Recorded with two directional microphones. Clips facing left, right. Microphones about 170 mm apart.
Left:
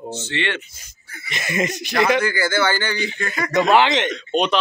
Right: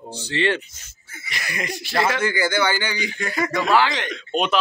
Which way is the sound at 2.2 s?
15° right (ahead or behind).